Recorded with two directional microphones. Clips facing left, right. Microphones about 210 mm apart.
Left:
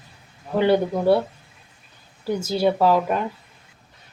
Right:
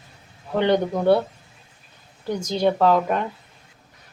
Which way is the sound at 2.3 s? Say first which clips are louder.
Left 1 dB; 5° left (ahead or behind).